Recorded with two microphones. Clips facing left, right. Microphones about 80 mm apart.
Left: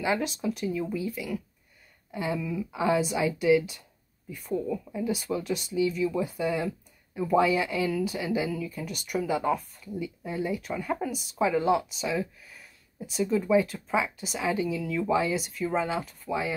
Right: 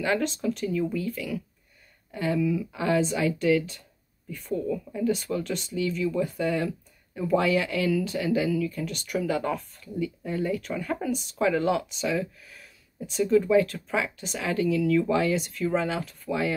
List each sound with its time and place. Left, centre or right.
0.0 s speech: centre
2.1 s speech: centre